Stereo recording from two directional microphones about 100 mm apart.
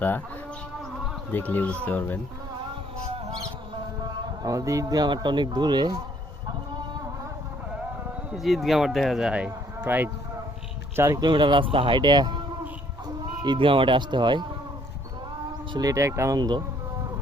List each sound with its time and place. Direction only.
1.3 s speech: 15° left (ahead or behind)
3.2 s a sound: 35° right (ahead or behind)
4.4 s speech: 35° right (ahead or behind)
8.3 s speech: centre (ahead or behind); by 10.1 s 20° right (ahead or behind)
10.9 s speech: 30° right (ahead or behind)
11.2 s speech: 50° right (ahead or behind)
13.4 s speech: 55° right (ahead or behind)
15.7 s speech: 35° right (ahead or behind)
16.4 s speech: 45° right (ahead or behind)